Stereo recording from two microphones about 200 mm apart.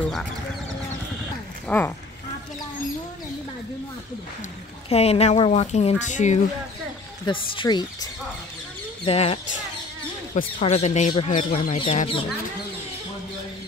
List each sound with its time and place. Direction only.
0.0 s speech: centre (ahead or behind)
1.7 s speech: 10° left (ahead or behind)
4.8 s speech: 30° left (ahead or behind)
7.2 s speech: 25° left (ahead or behind)